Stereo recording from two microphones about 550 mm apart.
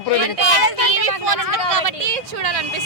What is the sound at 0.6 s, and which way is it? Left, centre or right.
Speech, right.